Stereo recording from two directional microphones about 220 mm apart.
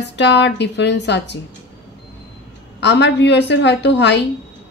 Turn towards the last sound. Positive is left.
turn(degrees=50)  # may be behind; listen again after turning